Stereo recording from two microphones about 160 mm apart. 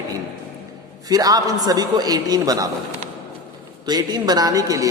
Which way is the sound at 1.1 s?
25° right (ahead or behind).